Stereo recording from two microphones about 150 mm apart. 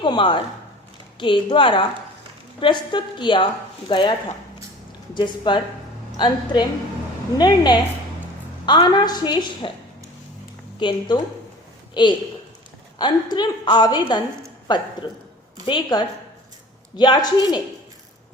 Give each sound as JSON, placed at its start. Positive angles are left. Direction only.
{"t": 0.0, "sound": "speech", "side_deg": 30}
{"t": 5.1, "sound": "a woman's voice", "side_deg": 30}
{"t": 10.8, "sound": "a woman's voice", "side_deg": 30}